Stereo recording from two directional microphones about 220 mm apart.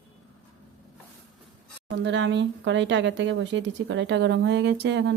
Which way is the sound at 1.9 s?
55° right (ahead or behind).